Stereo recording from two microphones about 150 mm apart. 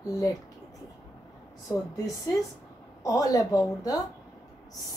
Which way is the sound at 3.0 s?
25° left (ahead or behind).